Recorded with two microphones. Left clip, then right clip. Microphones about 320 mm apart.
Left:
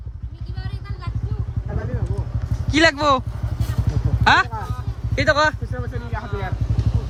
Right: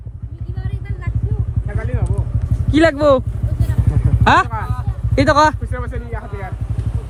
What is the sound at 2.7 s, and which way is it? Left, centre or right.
Speech, centre.